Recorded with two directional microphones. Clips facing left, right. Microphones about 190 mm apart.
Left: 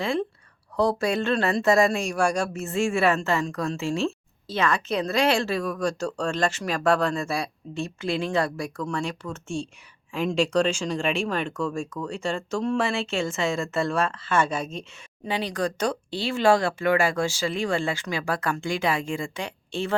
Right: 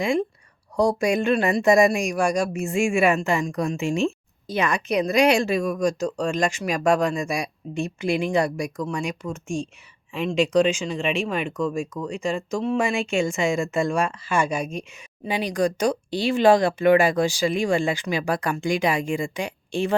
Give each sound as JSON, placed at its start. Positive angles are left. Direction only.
{"t": 0.8, "sound": "speech", "side_deg": -15}